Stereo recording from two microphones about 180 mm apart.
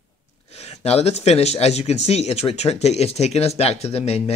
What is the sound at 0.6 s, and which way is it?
Speech, 35° left (ahead or behind).